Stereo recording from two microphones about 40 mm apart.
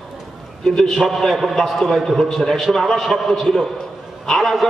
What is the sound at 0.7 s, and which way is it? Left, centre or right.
A man's voice, centre.